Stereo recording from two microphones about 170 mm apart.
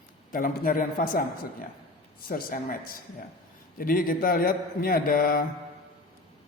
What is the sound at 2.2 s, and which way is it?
A man's voice, 55° left (ahead or behind).